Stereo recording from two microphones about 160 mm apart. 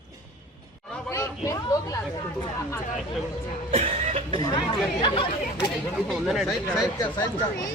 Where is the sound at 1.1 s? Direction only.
20° left (ahead or behind).